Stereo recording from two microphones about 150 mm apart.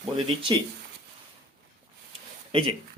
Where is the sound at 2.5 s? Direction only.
35° right (ahead or behind).